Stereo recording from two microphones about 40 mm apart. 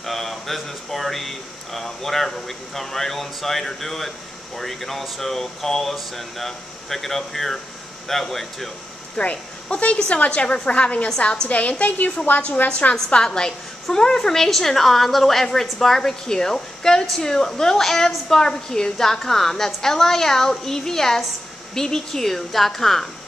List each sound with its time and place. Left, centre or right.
0.0 s a sound: centre
0.7 s speech: centre
9.1 s a woman's voice: left
12.3 s a woman's voice: left
12.6 s a woman's voice: left
13.1 s a woman's voice: centre